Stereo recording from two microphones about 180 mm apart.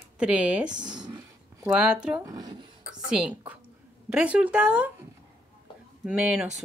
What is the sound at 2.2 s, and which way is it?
Speech, 20° right (ahead or behind).